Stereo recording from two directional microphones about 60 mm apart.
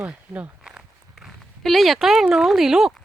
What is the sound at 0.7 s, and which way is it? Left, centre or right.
Walk, centre.